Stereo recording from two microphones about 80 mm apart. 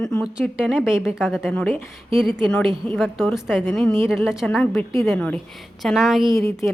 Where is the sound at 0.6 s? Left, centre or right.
Centre.